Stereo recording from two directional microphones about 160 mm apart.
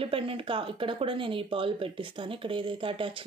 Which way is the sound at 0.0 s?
35° right (ahead or behind).